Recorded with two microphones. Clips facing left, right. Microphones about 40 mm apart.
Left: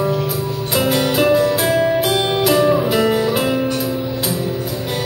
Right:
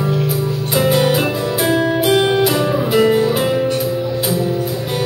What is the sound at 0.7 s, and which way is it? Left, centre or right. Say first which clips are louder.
Music: right 2 dB; centre.